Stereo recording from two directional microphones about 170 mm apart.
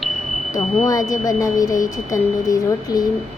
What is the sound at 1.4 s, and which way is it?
A woman's voice, 20° left (ahead or behind).